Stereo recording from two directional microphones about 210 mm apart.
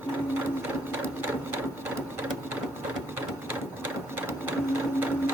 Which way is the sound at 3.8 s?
10° right (ahead or behind).